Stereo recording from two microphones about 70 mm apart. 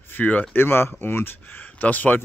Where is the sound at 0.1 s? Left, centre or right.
Left.